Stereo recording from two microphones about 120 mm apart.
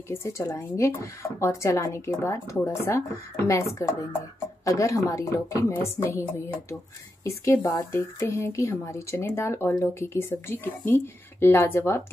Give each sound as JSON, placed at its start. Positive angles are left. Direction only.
{"t": 0.1, "sound": "a woman's voice", "side_deg": 25}